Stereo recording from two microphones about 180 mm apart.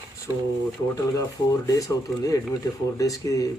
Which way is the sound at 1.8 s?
20° left (ahead or behind).